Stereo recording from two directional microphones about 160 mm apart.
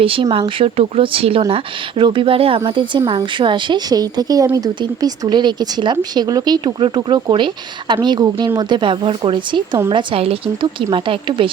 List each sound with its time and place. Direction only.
0.0 s speech: 35° right (ahead or behind)